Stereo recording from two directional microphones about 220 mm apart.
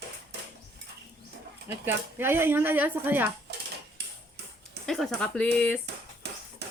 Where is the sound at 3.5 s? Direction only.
50° right (ahead or behind).